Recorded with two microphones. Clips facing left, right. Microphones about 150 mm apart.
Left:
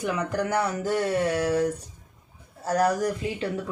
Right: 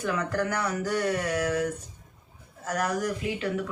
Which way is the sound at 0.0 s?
15° left (ahead or behind).